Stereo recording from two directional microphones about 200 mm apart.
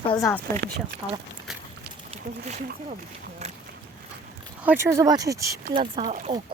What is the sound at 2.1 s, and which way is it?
Speech, 35° right (ahead or behind).